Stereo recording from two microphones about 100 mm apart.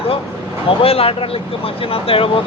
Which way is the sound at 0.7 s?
70° left (ahead or behind).